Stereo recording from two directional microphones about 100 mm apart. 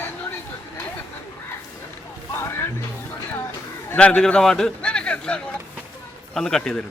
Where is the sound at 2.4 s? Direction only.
25° left (ahead or behind).